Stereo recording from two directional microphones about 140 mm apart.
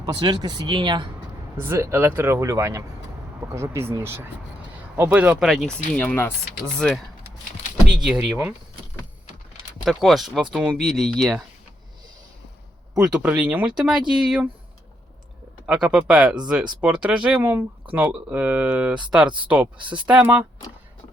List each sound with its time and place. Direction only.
0.0 s speech: 35° right (ahead or behind)
1.5 s speech: 15° right (ahead or behind)
5.5 s speech: 5° left (ahead or behind)
6.7 s speech: centre (ahead or behind)
9.8 s speech: centre (ahead or behind)
12.9 s speech: 5° right (ahead or behind)
15.6 s speech: 5° right (ahead or behind)
19.8 s speech: 35° right (ahead or behind)
20.1 s speech: 10° right (ahead or behind)